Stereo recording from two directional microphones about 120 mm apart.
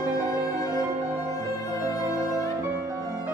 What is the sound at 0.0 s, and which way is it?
Music, 20° right (ahead or behind).